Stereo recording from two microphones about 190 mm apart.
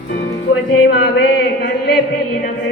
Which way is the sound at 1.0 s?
60° left (ahead or behind).